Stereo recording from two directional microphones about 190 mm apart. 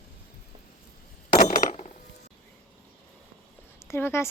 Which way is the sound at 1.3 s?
45° left (ahead or behind).